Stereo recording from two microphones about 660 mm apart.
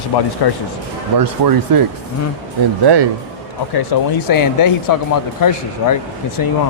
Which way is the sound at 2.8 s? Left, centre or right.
Right.